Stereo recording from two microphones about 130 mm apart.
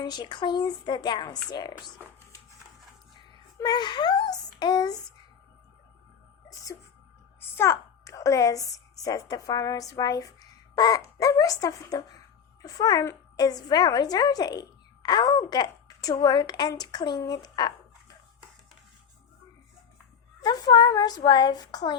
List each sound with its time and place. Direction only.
0.0 s a woman's voice: 35° left (ahead or behind)
3.6 s a woman's voice: 35° left (ahead or behind)
7.5 s a woman's voice: 20° left (ahead or behind)
20.4 s a woman's voice: 30° left (ahead or behind)